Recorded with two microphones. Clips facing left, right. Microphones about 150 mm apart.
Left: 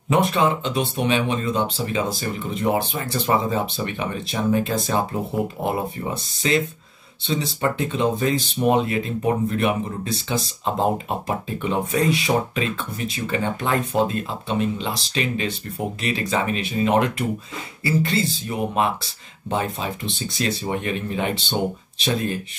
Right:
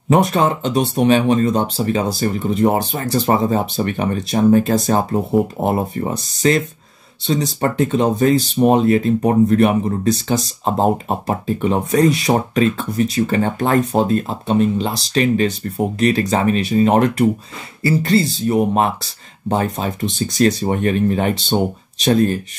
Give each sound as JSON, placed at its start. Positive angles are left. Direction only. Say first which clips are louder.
{"t": 0.1, "sound": "speech", "louder": "right 4 dB", "side_deg": -40}